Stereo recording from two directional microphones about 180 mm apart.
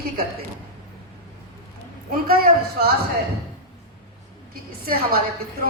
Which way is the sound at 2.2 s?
55° right (ahead or behind).